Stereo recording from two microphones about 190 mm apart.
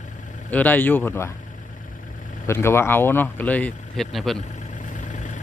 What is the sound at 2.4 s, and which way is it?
Speech, 10° left (ahead or behind).